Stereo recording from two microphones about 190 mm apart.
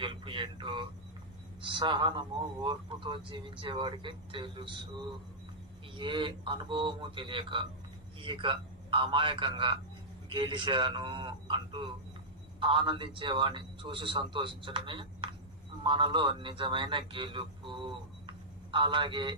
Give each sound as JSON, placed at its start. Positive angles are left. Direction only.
{"t": 0.0, "sound": "a man's voice", "side_deg": -25}